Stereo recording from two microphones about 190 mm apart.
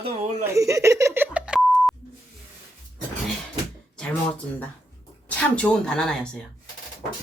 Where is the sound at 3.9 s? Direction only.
5° left (ahead or behind).